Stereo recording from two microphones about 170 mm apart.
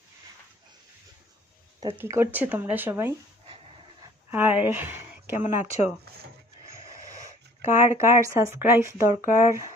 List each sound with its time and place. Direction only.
2.0 s speech: 15° right (ahead or behind)
4.3 s speech: 10° right (ahead or behind)